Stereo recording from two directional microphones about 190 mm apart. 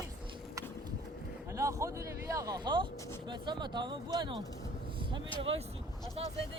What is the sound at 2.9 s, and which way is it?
Speech, 15° left (ahead or behind).